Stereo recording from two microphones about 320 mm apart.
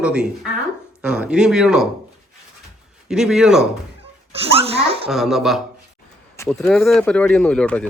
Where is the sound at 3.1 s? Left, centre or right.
Centre.